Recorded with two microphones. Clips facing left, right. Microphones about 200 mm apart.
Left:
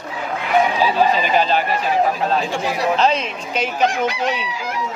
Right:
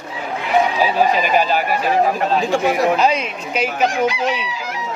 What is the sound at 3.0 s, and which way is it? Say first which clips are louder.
Speech: right 1 dB; 10° right (ahead or behind).